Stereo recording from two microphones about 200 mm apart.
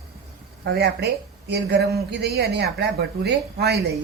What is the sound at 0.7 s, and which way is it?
Speech, 55° right (ahead or behind).